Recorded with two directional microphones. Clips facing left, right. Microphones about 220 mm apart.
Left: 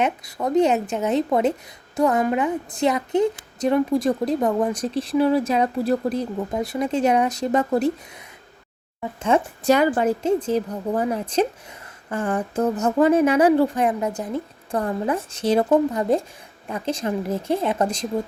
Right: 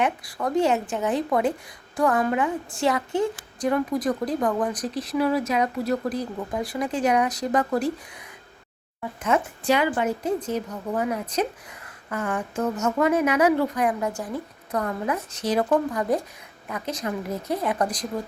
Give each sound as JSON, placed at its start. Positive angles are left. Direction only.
{"t": 0.0, "sound": "a woman's voice", "side_deg": 20}
{"t": 9.3, "sound": "a woman's voice", "side_deg": 30}
{"t": 9.6, "sound": "a woman's voice", "side_deg": 40}
{"t": 10.2, "sound": "a woman's voice", "side_deg": 30}